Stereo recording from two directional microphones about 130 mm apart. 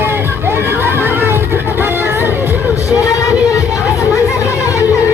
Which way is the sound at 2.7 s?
25° left (ahead or behind).